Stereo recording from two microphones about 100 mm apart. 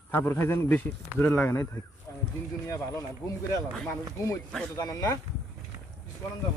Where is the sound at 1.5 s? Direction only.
30° left (ahead or behind).